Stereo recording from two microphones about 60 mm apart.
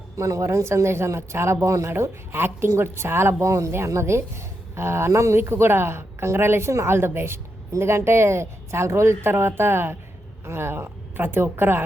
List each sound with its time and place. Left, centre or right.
0.2 s speech: right
2.3 s a woman's voice: right